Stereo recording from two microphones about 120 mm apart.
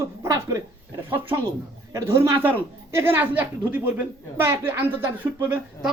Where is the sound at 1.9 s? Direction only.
25° right (ahead or behind).